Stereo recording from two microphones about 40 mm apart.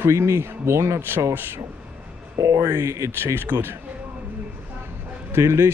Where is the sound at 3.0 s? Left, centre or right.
Right.